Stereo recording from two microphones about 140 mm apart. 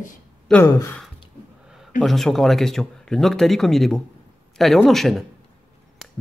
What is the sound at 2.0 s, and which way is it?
Speech, 5° left (ahead or behind).